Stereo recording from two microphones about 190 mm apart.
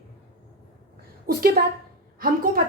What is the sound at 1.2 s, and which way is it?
Speech, 50° right (ahead or behind).